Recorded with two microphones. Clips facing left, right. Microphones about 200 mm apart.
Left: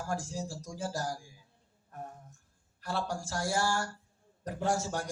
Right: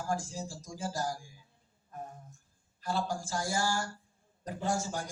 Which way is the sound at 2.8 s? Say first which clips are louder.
Right 1 dB; 75° left (ahead or behind).